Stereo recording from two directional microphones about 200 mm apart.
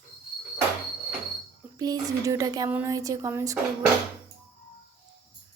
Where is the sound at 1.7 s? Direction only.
20° right (ahead or behind).